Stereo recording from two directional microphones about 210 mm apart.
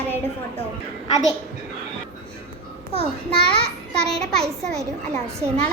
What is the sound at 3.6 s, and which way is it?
Speech, 50° right (ahead or behind).